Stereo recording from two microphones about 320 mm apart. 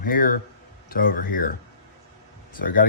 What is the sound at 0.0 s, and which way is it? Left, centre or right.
Speech, left.